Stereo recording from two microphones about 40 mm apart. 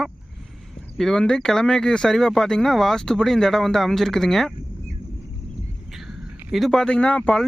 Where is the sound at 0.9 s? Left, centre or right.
Centre.